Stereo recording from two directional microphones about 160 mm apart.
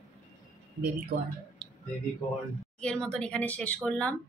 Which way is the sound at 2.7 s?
5° left (ahead or behind).